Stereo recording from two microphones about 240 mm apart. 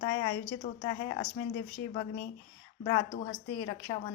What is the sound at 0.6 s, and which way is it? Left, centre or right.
A woman's voice, left.